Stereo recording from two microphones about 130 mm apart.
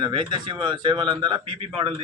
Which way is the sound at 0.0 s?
35° right (ahead or behind).